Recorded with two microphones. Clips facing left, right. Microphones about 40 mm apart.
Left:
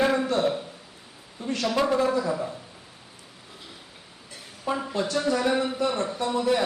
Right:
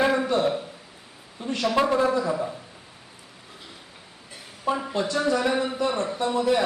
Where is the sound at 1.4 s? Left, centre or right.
Centre.